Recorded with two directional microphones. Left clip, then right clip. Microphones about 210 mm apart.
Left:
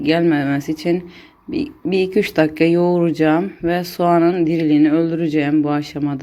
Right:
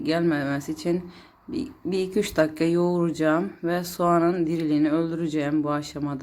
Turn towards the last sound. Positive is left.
turn(degrees=5)  # may be behind; listen again after turning